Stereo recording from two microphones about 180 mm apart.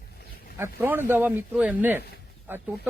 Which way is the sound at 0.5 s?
15° right (ahead or behind).